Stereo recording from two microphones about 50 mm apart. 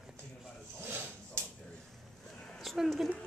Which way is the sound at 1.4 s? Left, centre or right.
Right.